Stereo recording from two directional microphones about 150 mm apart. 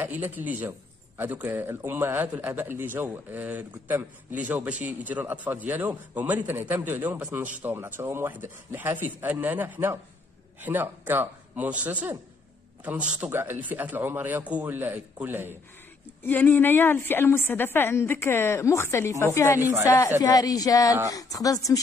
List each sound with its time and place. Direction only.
0.0 s a man's voice: 10° right (ahead or behind)
16.2 s a woman's voice: 10° left (ahead or behind)